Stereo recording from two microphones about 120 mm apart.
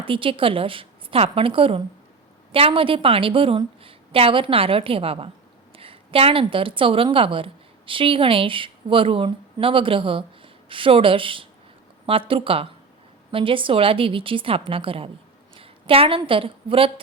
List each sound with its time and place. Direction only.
0.0 s a woman's voice: 45° right (ahead or behind)